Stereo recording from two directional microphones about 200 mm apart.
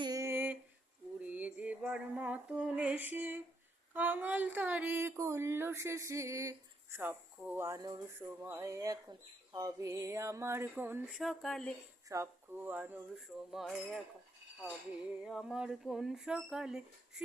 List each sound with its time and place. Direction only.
0.0 s a sound: 15° right (ahead or behind)
1.2 s female singing: 5° right (ahead or behind)
3.9 s speech: 10° right (ahead or behind)
12.0 s speech: 15° right (ahead or behind)
15.2 s speech: centre (ahead or behind)